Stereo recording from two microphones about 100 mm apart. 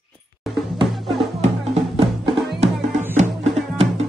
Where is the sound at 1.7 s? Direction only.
75° right (ahead or behind).